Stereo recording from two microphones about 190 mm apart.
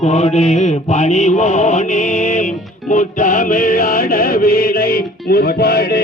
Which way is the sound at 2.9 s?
45° left (ahead or behind).